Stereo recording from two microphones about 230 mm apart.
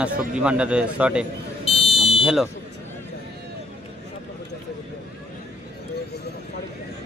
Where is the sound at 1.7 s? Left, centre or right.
Left.